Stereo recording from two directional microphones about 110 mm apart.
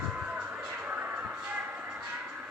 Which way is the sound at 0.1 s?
10° right (ahead or behind).